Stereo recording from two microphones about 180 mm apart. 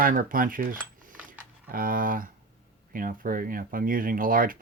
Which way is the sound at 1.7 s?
50° right (ahead or behind).